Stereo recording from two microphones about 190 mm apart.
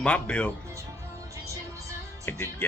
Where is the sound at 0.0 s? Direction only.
5° left (ahead or behind).